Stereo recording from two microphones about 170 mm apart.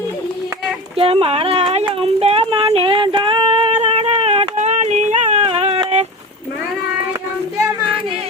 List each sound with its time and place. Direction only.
0.9 s speech: 35° right (ahead or behind)
1.9 s female singing: 35° right (ahead or behind)